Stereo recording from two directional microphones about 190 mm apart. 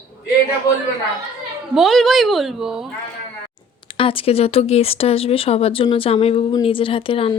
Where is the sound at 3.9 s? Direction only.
30° left (ahead or behind).